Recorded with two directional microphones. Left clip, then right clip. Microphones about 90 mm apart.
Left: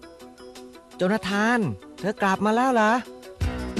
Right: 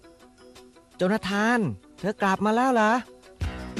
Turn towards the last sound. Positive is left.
turn(degrees=45)  # may be behind; listen again after turning